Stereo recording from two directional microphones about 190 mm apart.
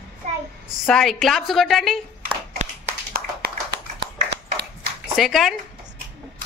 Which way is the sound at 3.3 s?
60° right (ahead or behind).